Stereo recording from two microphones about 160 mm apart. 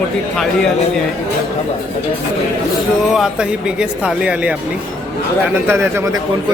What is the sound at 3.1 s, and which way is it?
Speech, 5° right (ahead or behind).